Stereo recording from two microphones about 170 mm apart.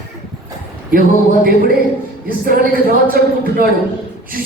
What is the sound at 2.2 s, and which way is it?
Speech, 60° right (ahead or behind).